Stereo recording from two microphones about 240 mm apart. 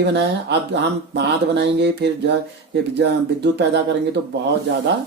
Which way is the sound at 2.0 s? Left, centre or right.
Right.